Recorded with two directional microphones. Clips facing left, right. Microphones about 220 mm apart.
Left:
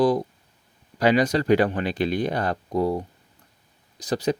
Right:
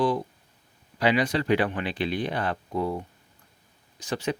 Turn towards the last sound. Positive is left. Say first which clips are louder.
# left 5 dB
turn(degrees=35)  # may be behind; listen again after turning